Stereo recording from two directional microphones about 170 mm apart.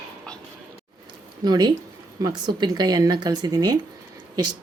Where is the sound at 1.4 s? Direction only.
25° right (ahead or behind).